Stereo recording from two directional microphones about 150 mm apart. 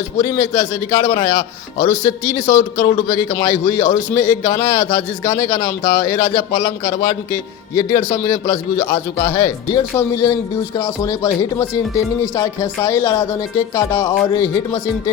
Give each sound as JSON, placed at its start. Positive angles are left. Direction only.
{"t": 0.2, "sound": "a man's voice", "side_deg": 25}